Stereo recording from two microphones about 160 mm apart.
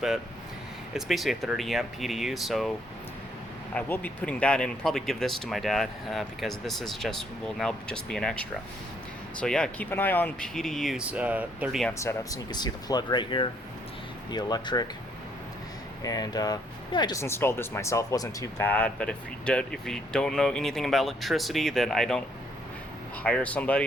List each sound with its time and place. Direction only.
0.9 s speech: centre (ahead or behind)
3.8 s speech: 10° left (ahead or behind); by 11.8 s 10° right (ahead or behind)
11.9 s speech: 20° left (ahead or behind)
16.0 s speech: 25° left (ahead or behind); by 22.2 s 5° left (ahead or behind)
23.2 s speech: 10° left (ahead or behind)